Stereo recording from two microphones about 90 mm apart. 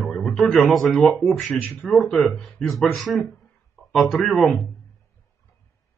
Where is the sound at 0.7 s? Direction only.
Centre (ahead or behind).